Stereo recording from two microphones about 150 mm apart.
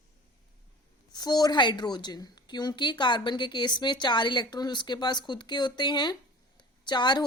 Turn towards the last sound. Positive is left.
turn(degrees=30)  # may be behind; listen again after turning